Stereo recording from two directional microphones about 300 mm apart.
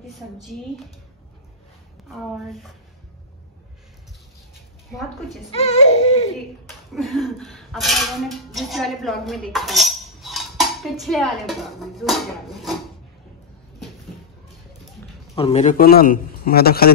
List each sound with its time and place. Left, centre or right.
2.0 s speech: centre
4.9 s speech: centre
5.5 s a man's voice: left
6.9 s speech: centre
15.3 s a man's voice: centre